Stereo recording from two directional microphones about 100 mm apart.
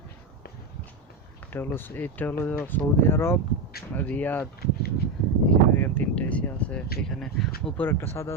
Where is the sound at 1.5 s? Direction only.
20° left (ahead or behind).